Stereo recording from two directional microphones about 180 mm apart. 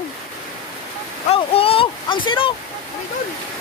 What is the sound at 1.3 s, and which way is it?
Speech, 30° left (ahead or behind).